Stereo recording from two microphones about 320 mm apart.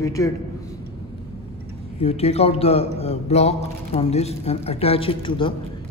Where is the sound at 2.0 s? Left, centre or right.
Centre.